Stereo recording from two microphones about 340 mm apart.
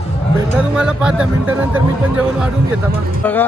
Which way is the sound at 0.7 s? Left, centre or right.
Centre.